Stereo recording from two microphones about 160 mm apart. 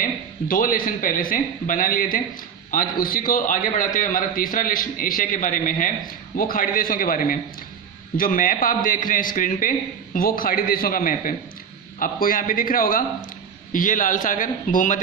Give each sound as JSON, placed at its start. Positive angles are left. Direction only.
{"t": 0.0, "sound": "a man's voice", "side_deg": 60}